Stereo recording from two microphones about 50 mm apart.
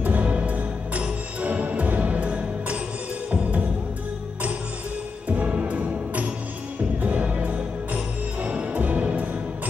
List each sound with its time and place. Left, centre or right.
0.0 s music: right
5.3 s music: right